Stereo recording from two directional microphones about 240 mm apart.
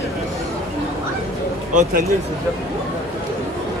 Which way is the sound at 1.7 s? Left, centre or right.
Right.